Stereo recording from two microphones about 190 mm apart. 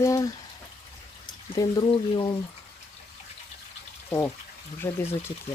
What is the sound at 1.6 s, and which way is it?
Speech, 20° left (ahead or behind).